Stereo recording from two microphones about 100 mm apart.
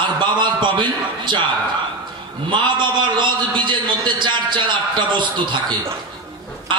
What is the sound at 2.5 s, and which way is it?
A man's voice, 50° right (ahead or behind).